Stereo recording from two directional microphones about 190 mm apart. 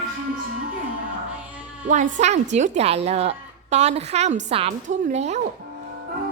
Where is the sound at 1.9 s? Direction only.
40° right (ahead or behind).